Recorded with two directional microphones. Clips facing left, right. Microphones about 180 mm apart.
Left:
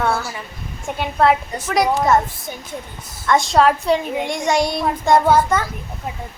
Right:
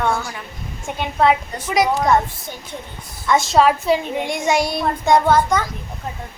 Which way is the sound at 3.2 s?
Centre (ahead or behind).